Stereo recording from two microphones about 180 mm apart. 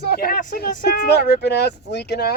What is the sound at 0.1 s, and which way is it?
Speech, 55° left (ahead or behind).